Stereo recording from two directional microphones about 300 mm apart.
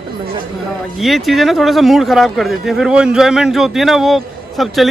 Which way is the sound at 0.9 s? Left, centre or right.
Centre.